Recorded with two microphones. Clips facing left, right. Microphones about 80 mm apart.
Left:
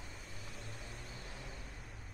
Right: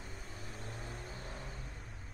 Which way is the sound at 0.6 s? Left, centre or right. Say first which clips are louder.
Right 6 dB; right.